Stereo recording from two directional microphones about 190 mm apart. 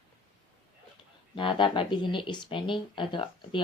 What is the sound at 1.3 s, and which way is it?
Speech, 25° left (ahead or behind).